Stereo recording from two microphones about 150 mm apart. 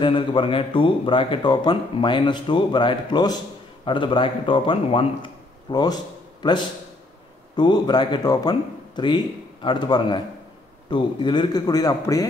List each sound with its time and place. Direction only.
0.0 s speech: 35° left (ahead or behind)
7.5 s a man's voice: 30° left (ahead or behind)